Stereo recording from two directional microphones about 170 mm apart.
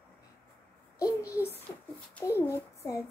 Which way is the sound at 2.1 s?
15° left (ahead or behind).